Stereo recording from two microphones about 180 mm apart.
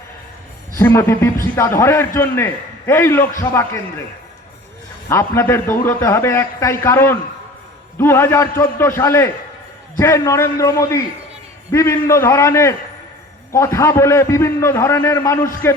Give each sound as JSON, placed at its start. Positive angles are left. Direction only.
{"t": 0.8, "sound": "a man's voice", "side_deg": 15}
{"t": 5.0, "sound": "a man's voice", "side_deg": 15}